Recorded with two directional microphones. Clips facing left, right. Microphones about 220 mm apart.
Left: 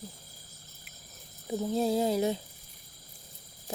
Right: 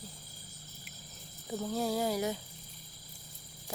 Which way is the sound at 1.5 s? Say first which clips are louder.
Left 5 dB; 20° left (ahead or behind).